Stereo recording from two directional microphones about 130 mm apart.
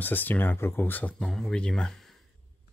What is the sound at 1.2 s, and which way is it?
Speech, 5° left (ahead or behind).